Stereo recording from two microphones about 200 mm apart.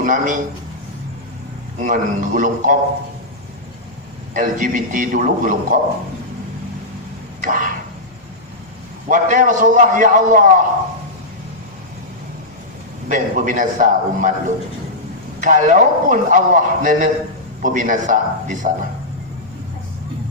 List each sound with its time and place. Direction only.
0.0 s speech: 40° right (ahead or behind)
1.8 s a man's voice: 40° right (ahead or behind)
4.4 s a man's voice: 40° right (ahead or behind)
7.4 s speech: 40° right (ahead or behind)
9.0 s a man's voice: 40° right (ahead or behind)
13.1 s a man's voice: 40° right (ahead or behind)
15.4 s a man's voice: 40° right (ahead or behind)